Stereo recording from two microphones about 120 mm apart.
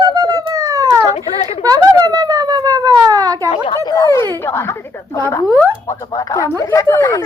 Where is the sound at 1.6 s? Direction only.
30° right (ahead or behind).